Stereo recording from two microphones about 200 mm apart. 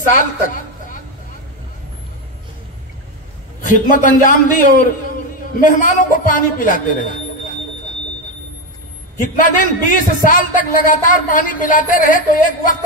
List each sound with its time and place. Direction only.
3.6 s a man's voice: 40° left (ahead or behind)
9.2 s a man's voice: 40° left (ahead or behind)